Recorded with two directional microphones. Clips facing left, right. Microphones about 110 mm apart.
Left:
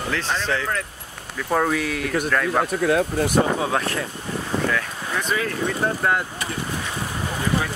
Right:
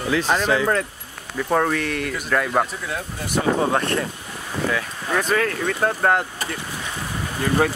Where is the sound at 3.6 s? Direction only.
Centre (ahead or behind).